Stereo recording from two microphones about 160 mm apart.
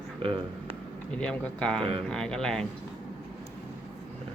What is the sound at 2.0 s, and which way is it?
Speech, 5° left (ahead or behind).